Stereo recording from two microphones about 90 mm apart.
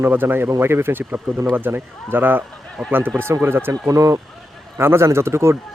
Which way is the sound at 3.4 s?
25° right (ahead or behind).